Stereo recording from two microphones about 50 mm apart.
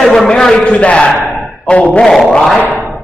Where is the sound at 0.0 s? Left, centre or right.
Centre.